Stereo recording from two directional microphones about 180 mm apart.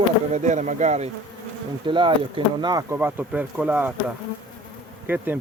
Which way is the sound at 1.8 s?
25° right (ahead or behind).